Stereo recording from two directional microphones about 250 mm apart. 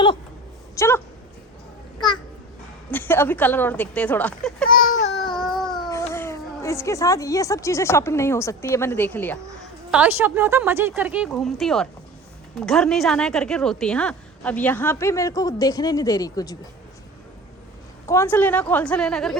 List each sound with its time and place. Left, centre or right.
0.8 s a woman's voice: centre
2.9 s a woman's voice: centre
4.7 s baby cry: left
5.2 s baby cry: centre
5.9 s speech: centre
9.9 s a woman's voice: centre
18.0 s a woman's voice: centre